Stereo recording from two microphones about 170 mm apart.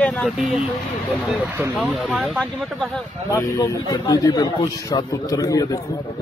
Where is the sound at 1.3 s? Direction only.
10° right (ahead or behind).